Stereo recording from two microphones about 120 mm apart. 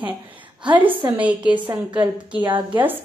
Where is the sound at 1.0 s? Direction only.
10° right (ahead or behind).